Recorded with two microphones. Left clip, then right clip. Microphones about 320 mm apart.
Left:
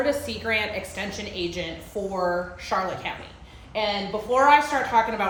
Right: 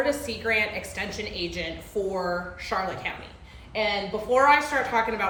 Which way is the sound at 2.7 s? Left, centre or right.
Centre.